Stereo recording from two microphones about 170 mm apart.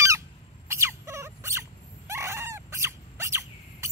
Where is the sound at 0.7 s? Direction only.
15° right (ahead or behind).